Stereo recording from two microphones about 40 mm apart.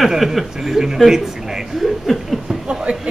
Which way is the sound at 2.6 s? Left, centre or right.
Right.